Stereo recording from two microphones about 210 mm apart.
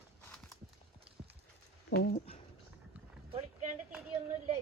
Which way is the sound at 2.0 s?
50° left (ahead or behind).